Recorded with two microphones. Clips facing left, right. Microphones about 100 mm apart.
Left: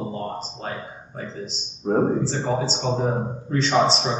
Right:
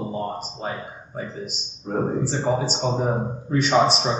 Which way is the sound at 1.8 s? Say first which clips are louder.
Left 6 dB; 45° left (ahead or behind).